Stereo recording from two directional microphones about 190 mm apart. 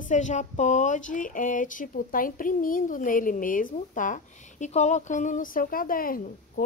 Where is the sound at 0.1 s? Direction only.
40° left (ahead or behind).